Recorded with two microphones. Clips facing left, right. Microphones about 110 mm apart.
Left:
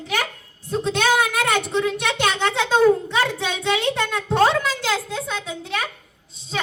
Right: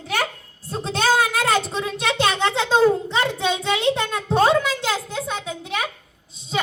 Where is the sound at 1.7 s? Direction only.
25° right (ahead or behind).